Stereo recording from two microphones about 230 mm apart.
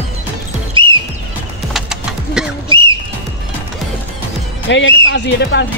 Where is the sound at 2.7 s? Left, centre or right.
Right.